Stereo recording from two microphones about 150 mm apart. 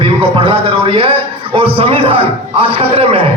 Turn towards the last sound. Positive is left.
turn(degrees=-40)  # may be behind; listen again after turning